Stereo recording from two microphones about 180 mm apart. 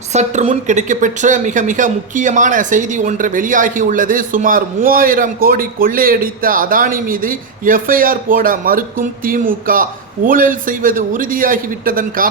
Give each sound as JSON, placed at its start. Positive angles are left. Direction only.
{"t": 0.1, "sound": "a woman's voice", "side_deg": -40}